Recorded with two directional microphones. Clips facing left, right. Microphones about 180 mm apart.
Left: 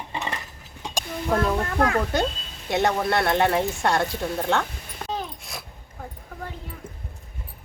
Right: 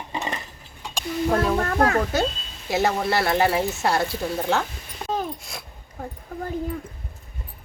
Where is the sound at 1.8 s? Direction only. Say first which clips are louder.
Right 1 dB; 40° right (ahead or behind).